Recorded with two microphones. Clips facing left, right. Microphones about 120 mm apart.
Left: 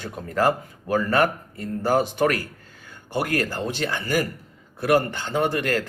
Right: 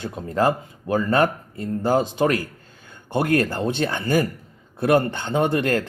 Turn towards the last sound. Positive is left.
turn(degrees=-25)  # may be behind; listen again after turning